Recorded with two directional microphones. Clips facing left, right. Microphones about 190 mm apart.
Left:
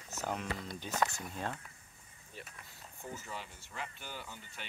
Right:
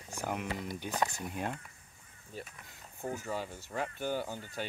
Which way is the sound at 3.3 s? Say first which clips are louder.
Right 9 dB; 45° right (ahead or behind).